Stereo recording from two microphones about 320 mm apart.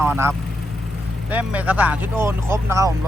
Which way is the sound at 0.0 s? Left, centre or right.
Centre.